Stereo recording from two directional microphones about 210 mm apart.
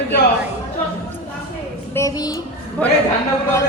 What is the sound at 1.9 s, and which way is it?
Speech, 15° left (ahead or behind).